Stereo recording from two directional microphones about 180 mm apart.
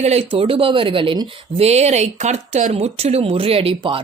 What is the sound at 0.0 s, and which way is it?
Speech, 35° right (ahead or behind).